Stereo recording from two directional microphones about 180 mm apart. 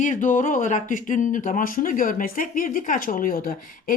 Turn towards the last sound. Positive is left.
turn(degrees=50)  # may be behind; listen again after turning